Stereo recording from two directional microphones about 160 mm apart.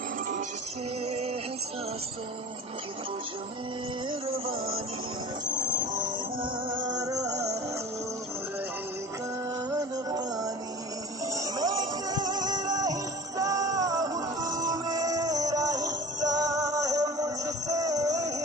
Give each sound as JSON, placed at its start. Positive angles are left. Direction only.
{"t": 1.0, "sound": "music", "side_deg": -40}
{"t": 4.1, "sound": "music", "side_deg": -35}
{"t": 5.8, "sound": "train", "side_deg": -55}
{"t": 6.4, "sound": "music", "side_deg": -25}
{"t": 9.6, "sound": "music", "side_deg": -25}